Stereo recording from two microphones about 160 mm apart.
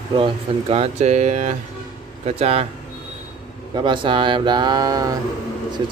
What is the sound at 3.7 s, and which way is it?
Speech, 30° right (ahead or behind).